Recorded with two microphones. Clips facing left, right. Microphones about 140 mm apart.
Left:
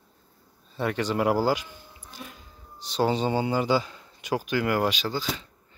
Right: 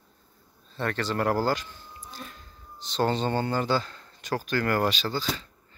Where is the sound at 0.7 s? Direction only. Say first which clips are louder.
Left 2 dB; 10° left (ahead or behind).